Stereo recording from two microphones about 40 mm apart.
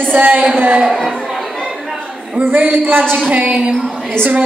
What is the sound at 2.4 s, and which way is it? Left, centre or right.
A man's voice, right.